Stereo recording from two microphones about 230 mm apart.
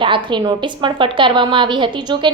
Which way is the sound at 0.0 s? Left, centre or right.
Right.